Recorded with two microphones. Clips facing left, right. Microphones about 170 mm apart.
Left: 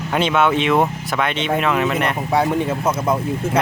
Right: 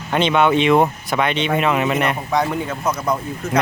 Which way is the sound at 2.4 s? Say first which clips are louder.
Left 5 dB; 25° left (ahead or behind).